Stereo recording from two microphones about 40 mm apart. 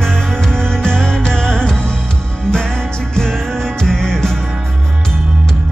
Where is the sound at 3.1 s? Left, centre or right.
Centre.